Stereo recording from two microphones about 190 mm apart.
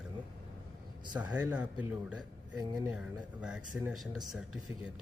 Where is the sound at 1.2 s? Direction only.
10° right (ahead or behind).